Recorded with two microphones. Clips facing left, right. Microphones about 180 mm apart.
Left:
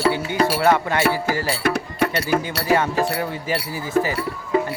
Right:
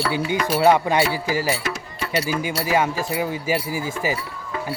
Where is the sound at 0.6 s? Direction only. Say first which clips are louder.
Right 6 dB; 15° right (ahead or behind).